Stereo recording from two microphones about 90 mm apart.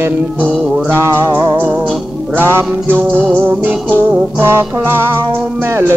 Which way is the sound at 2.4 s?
25° right (ahead or behind).